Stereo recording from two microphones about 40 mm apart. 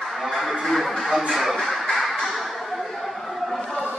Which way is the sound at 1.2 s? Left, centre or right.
Centre.